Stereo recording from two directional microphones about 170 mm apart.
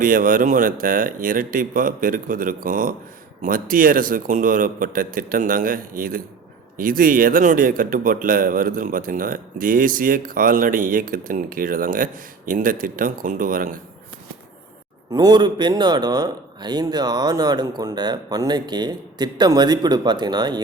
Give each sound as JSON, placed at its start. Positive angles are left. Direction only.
{"t": 0.0, "sound": "speech", "side_deg": -55}
{"t": 15.1, "sound": "a man's voice", "side_deg": -25}